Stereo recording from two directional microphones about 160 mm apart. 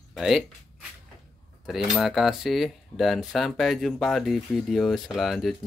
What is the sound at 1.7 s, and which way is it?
Speech, centre (ahead or behind).